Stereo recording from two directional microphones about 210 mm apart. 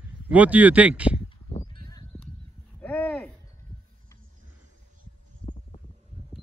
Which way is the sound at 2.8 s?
5° left (ahead or behind).